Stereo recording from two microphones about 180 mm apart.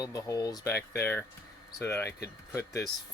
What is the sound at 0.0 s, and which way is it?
Speech, 20° left (ahead or behind).